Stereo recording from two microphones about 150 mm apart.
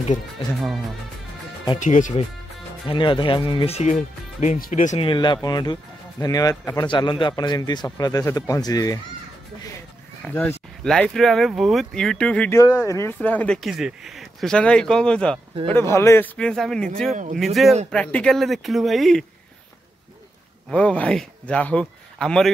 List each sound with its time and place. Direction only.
1.8 s speech: 60° left (ahead or behind)
2.9 s speech: 35° left (ahead or behind)
3.9 s speech: 60° left (ahead or behind)
4.9 s a man's voice: 35° left (ahead or behind)
10.2 s speech: 10° left (ahead or behind)
12.5 s a man's voice: 20° left (ahead or behind)
13.6 s speech: 5° right (ahead or behind)
15.7 s speech: 20° left (ahead or behind)
16.3 s speech: 5° left (ahead or behind)
17.1 s speech: 60° right (ahead or behind)
17.6 s speech: centre (ahead or behind)
20.7 s speech: 10° left (ahead or behind)